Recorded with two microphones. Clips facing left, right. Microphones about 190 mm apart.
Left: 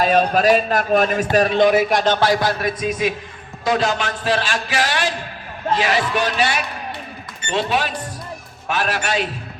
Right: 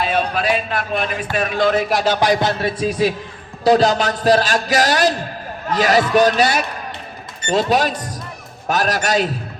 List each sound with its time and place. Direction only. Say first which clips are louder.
0.0 s a man's voice: left 4 dB; 40° left (ahead or behind)
1.7 s speech: left 1 dB; centre (ahead or behind)
2.1 s a man's voice: right 1 dB; 15° right (ahead or behind); by 9.3 s 40° right (ahead or behind)